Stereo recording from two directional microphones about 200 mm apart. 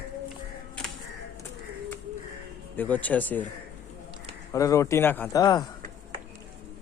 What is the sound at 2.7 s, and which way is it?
Speech, 10° left (ahead or behind).